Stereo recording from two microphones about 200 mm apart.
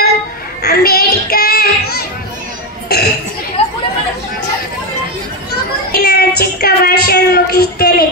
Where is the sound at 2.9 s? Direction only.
50° left (ahead or behind).